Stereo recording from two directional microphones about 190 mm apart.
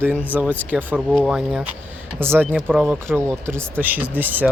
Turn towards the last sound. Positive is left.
turn(degrees=-10)  # may be behind; listen again after turning